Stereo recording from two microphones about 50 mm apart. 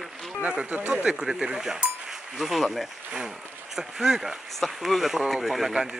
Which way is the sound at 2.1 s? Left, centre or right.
Centre.